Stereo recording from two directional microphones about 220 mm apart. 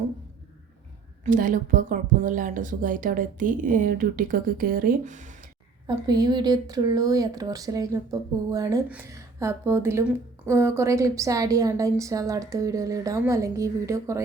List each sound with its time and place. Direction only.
1.2 s speech: 35° right (ahead or behind)
6.1 s speech: 20° right (ahead or behind)